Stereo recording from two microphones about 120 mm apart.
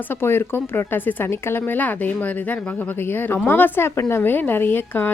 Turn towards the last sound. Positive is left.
turn(degrees=15)  # may be behind; listen again after turning